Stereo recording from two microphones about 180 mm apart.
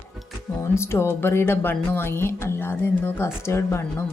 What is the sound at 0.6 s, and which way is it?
Speech, 15° left (ahead or behind).